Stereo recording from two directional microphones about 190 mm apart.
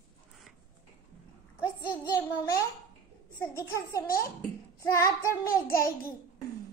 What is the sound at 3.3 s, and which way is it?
Child singing, 15° left (ahead or behind).